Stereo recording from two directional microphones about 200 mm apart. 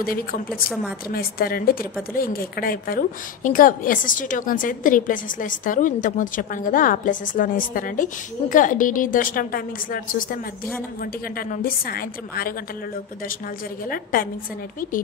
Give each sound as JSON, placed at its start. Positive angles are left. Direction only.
{"t": 0.0, "sound": "a woman's voice", "side_deg": 45}
{"t": 0.5, "sound": "a woman's voice", "side_deg": -5}
{"t": 1.1, "sound": "a woman's voice", "side_deg": 50}
{"t": 13.8, "sound": "a woman's voice", "side_deg": 45}